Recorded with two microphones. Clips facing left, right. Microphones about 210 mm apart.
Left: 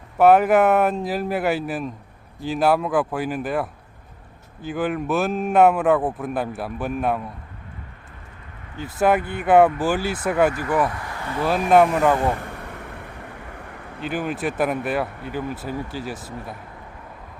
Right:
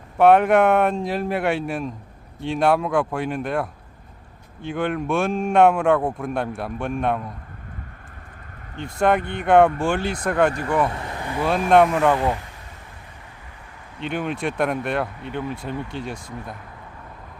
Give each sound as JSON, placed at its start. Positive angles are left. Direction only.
{"t": 0.2, "sound": "a man's voice", "side_deg": 5}
{"t": 8.7, "sound": "a man's voice", "side_deg": 5}
{"t": 10.8, "sound": "speech", "side_deg": -25}
{"t": 11.4, "sound": "a man's voice", "side_deg": 5}
{"t": 12.3, "sound": "a sound", "side_deg": 55}
{"t": 14.0, "sound": "a man's voice", "side_deg": 5}